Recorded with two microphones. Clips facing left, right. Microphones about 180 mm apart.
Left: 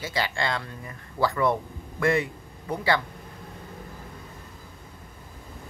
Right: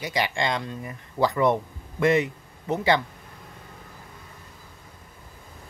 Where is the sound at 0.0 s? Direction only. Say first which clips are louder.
Right 2 dB; 15° right (ahead or behind).